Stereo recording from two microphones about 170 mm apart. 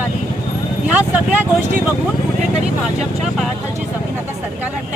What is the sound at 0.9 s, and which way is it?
Speech, 10° right (ahead or behind).